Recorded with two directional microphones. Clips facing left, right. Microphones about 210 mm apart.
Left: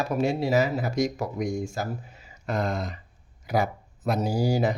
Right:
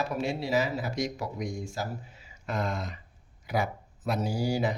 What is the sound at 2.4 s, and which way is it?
Speech, 35° left (ahead or behind).